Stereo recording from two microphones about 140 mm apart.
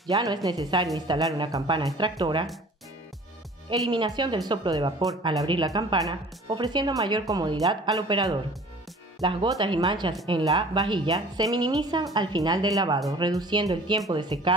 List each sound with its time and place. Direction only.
0.1 s speech: 25° right (ahead or behind)
3.9 s speech: 30° right (ahead or behind)